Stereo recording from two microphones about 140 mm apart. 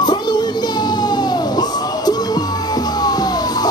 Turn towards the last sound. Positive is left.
turn(degrees=30)  # may be behind; listen again after turning